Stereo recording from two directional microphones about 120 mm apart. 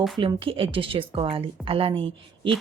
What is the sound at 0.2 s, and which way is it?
Speech, 45° right (ahead or behind).